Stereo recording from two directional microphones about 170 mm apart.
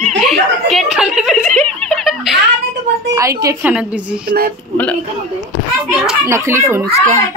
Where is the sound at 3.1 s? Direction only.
20° right (ahead or behind).